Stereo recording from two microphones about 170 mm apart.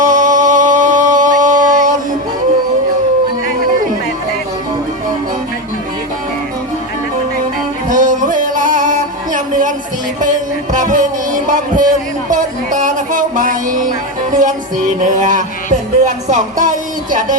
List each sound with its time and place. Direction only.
0.0 s music: 50° right (ahead or behind)
7.9 s music: 50° right (ahead or behind)